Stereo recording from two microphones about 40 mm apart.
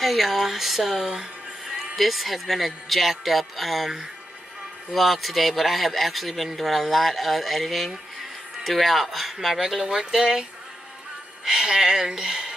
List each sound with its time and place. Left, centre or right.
0.0 s speech: centre
11.4 s speech: centre